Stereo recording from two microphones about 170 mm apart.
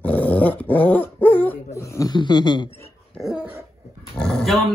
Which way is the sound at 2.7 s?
10° left (ahead or behind).